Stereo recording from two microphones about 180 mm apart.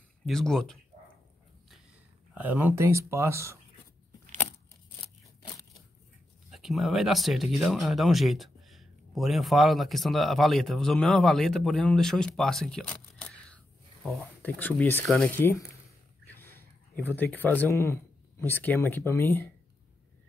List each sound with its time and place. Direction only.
0.3 s speech: centre (ahead or behind)
2.3 s speech: 10° right (ahead or behind)
6.5 s speech: centre (ahead or behind)